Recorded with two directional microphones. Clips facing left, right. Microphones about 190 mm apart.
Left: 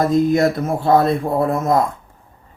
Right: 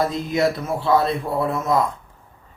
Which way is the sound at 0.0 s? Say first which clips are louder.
Left 6 dB; 45° left (ahead or behind).